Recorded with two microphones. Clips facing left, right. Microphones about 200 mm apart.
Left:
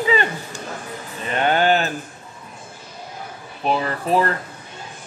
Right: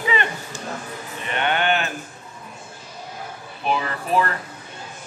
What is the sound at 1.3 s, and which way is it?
Speech, 35° left (ahead or behind).